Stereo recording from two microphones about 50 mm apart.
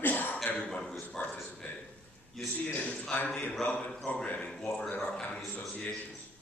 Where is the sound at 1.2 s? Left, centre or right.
Left.